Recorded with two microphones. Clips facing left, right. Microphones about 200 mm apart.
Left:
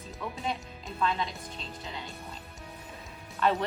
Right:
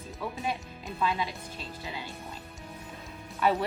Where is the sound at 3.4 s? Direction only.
15° right (ahead or behind).